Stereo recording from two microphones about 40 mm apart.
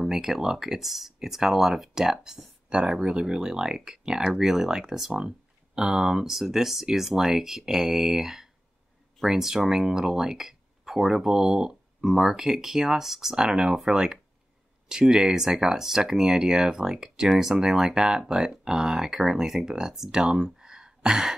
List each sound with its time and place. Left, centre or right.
0.0 s speech: centre
2.7 s speech: right